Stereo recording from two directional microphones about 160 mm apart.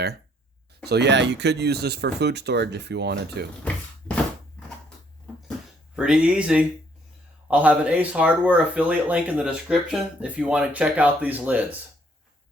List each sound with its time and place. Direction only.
0.9 s speech: 90° right
6.0 s speech: 5° right (ahead or behind)